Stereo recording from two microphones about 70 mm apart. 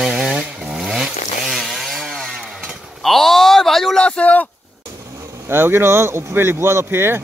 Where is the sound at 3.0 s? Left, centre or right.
Centre.